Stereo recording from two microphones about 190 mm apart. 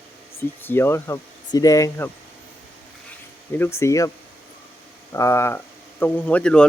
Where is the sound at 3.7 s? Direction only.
15° left (ahead or behind).